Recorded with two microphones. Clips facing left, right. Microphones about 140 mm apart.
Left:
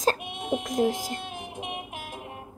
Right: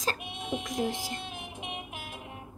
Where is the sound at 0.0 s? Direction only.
45° left (ahead or behind).